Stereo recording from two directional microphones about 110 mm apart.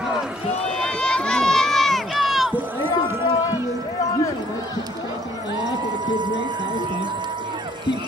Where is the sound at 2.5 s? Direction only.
20° right (ahead or behind).